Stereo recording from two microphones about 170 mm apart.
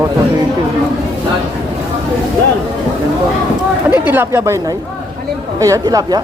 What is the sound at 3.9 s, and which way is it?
Speech, 10° right (ahead or behind).